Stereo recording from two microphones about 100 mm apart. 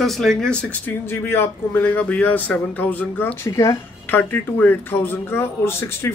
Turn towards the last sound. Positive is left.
turn(degrees=25)  # may be behind; listen again after turning